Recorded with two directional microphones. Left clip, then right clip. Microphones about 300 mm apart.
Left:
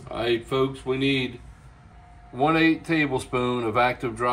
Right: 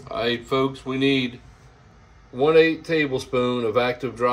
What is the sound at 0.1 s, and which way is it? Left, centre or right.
Speech, centre.